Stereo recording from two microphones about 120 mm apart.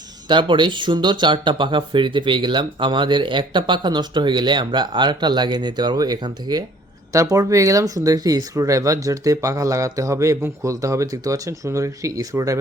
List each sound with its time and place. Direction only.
0.3 s speech: 40° right (ahead or behind); by 12.5 s 25° right (ahead or behind)